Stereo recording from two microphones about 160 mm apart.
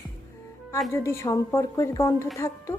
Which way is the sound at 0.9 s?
15° left (ahead or behind).